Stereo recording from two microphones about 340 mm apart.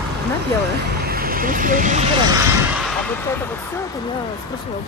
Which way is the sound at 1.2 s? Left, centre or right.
Right.